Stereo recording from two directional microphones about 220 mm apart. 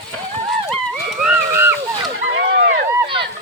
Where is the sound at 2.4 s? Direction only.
45° right (ahead or behind).